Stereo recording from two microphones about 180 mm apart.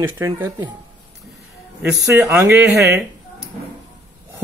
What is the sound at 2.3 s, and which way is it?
Speech, 15° right (ahead or behind).